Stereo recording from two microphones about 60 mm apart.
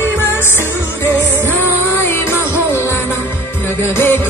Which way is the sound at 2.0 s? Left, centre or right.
Left.